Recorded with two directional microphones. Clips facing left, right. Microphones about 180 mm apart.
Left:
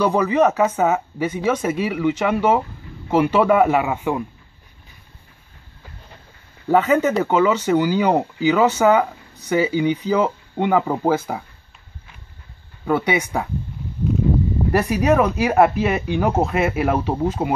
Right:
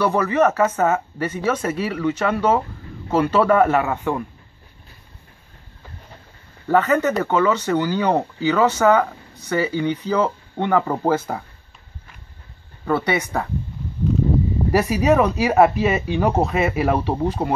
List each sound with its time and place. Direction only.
0.0 s speech: 15° left (ahead or behind)
6.7 s speech: 10° left (ahead or behind)
12.8 s speech: 10° left (ahead or behind)
14.7 s speech: 5° right (ahead or behind)